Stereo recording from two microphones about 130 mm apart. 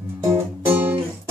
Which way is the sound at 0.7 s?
15° right (ahead or behind).